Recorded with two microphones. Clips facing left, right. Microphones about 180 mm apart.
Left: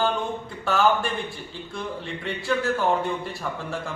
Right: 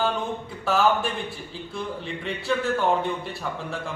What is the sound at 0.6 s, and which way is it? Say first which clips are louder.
Speech: even; centre (ahead or behind).